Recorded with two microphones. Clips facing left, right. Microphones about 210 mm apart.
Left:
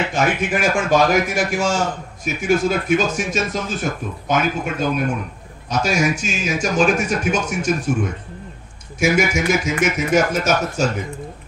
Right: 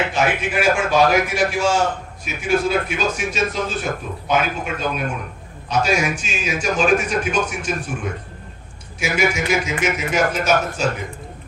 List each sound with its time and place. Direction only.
0.1 s speech: 45° left (ahead or behind)